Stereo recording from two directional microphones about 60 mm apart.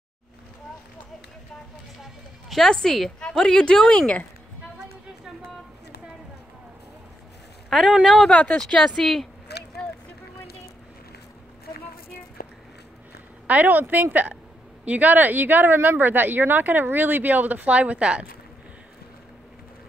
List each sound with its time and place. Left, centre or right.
2.5 s a woman's voice: centre
7.7 s speech: centre
8.3 s a woman's voice: centre
13.5 s a woman's voice: right